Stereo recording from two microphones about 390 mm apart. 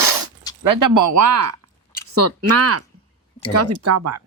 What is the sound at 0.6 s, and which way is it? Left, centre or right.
Speech, right.